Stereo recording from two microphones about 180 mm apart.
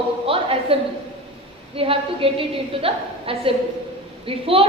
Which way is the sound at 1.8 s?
30° right (ahead or behind).